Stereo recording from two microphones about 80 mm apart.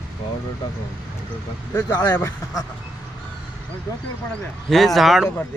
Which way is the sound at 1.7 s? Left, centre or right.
Left.